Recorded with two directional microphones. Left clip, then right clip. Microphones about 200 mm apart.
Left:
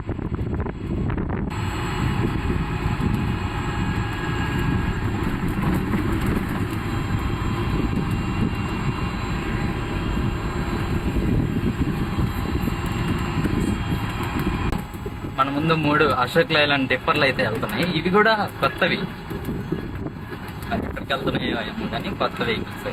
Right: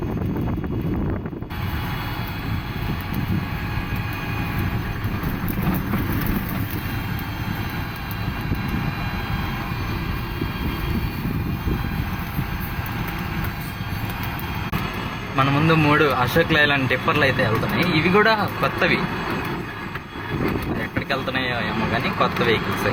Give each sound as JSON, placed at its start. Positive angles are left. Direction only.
{"t": 15.4, "sound": "speech", "side_deg": 0}